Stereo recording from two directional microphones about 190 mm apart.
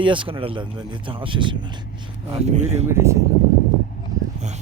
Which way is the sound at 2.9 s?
15° right (ahead or behind).